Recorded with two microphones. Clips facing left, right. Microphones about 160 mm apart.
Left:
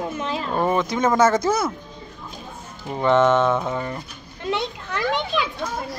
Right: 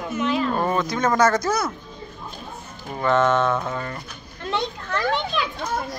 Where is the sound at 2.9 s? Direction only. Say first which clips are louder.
Left 2 dB; 20° left (ahead or behind).